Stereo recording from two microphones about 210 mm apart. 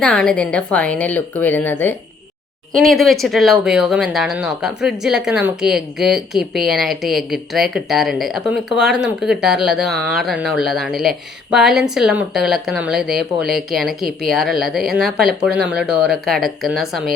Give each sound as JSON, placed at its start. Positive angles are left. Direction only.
{"t": 0.0, "sound": "a woman's voice", "side_deg": 5}